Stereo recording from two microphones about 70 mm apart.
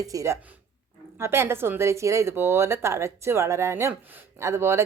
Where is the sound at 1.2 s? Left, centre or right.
Right.